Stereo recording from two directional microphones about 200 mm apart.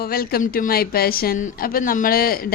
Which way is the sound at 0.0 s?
50° left (ahead or behind).